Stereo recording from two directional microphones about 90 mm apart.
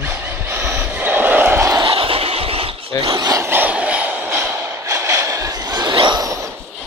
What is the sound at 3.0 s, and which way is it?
Speech, 55° right (ahead or behind).